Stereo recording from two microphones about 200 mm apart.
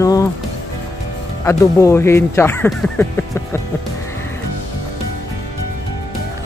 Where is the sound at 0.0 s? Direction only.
15° left (ahead or behind).